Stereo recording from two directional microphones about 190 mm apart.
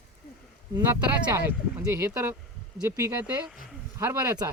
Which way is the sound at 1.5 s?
15° right (ahead or behind).